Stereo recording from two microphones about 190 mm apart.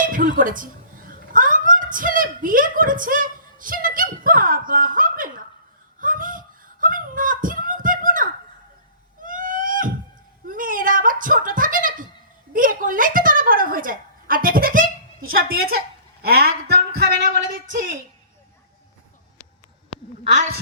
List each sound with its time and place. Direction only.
0.0 s a sound: 45° right (ahead or behind)
12.5 s a woman's voice: 45° right (ahead or behind)
20.2 s a woman's voice: 40° right (ahead or behind)